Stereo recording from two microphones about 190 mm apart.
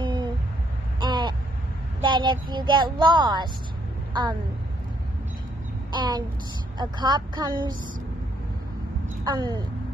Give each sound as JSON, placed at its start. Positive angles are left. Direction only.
{"t": 0.0, "sound": "a sound", "side_deg": -25}
{"t": 2.0, "sound": "a woman's voice", "side_deg": -25}
{"t": 5.9, "sound": "a child's voice", "side_deg": -20}
{"t": 9.2, "sound": "speech", "side_deg": -20}